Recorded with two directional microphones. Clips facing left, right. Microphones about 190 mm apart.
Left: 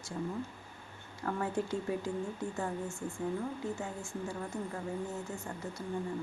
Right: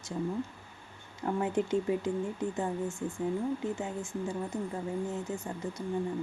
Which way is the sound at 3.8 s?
20° right (ahead or behind).